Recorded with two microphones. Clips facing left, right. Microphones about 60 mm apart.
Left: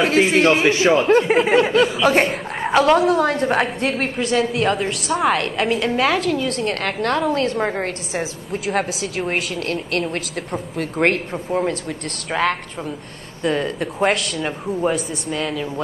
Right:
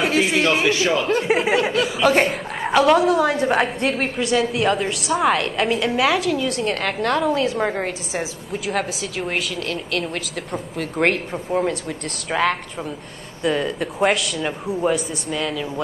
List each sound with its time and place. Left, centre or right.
0.2 s a man's voice: left
1.2 s a woman's voice: centre
1.5 s a man's voice: left
2.0 s speech: centre
2.8 s a woman's voice: centre
11.0 s a woman's voice: centre